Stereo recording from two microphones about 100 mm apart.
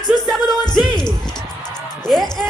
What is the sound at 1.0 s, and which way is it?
Basketball bounce, 45° left (ahead or behind).